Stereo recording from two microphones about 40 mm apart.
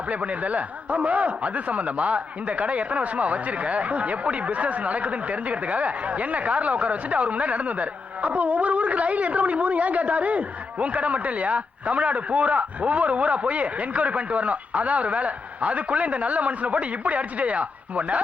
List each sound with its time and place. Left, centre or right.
0.1 s speech: right